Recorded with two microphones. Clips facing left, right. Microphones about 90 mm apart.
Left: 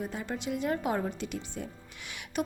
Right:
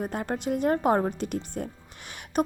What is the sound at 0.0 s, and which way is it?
Speech, 55° right (ahead or behind).